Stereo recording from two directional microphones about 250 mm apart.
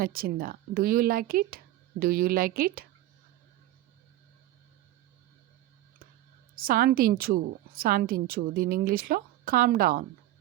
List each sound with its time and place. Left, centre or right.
0.0 s a woman's voice: right
6.6 s a woman's voice: right